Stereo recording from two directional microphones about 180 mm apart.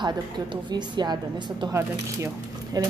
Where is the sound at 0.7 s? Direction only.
25° right (ahead or behind).